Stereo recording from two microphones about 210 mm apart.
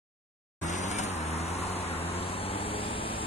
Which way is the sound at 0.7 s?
35° left (ahead or behind).